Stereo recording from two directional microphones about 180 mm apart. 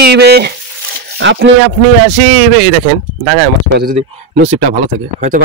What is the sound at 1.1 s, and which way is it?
Speech, 90° right.